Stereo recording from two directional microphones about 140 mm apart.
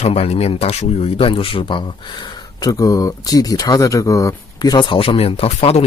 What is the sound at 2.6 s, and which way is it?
Speech, 25° left (ahead or behind).